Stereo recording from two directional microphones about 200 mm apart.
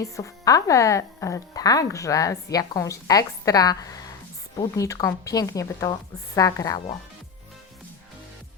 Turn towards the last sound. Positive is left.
turn(degrees=15)  # may be behind; listen again after turning